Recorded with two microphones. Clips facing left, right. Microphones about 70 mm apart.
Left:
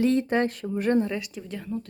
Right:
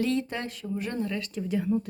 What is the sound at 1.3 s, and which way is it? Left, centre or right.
Speech, centre.